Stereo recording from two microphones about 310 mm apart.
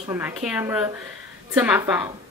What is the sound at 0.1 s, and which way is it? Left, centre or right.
Speech, centre.